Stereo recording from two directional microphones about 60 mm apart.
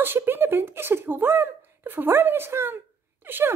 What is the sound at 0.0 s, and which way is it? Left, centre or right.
Speech, right.